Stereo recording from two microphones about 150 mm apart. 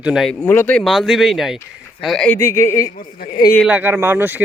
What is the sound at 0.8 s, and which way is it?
Speech, centre (ahead or behind).